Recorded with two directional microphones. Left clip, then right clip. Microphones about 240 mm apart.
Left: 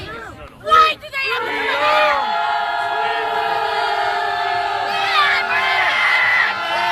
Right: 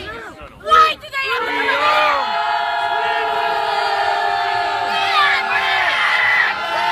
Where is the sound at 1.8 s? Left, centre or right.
Right.